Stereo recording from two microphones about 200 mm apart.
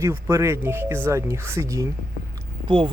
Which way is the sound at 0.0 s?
15° right (ahead or behind).